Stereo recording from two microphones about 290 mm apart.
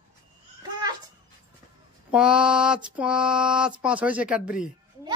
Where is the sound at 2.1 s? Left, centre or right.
Centre.